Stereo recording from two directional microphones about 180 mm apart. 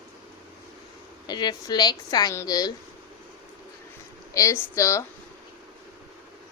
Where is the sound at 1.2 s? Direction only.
25° left (ahead or behind).